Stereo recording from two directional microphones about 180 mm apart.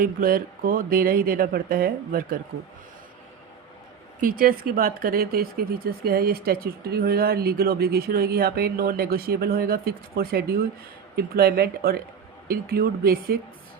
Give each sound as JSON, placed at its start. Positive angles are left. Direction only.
{"t": 0.0, "sound": "speech", "side_deg": -50}
{"t": 4.2, "sound": "speech", "side_deg": -50}